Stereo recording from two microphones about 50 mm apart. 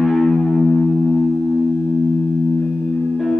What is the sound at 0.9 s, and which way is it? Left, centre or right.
Music, centre.